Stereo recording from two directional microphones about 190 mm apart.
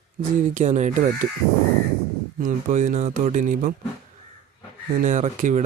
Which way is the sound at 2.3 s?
45° right (ahead or behind).